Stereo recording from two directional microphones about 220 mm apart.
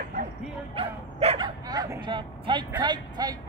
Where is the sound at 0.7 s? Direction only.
25° right (ahead or behind).